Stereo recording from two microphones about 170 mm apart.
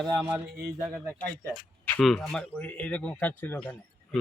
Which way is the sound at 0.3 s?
10° right (ahead or behind).